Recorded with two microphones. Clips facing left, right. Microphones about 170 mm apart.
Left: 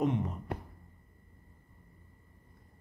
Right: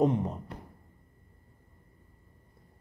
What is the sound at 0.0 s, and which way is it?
Speech, 35° right (ahead or behind).